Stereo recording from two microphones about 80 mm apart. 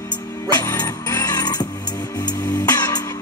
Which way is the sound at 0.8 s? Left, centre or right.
Left.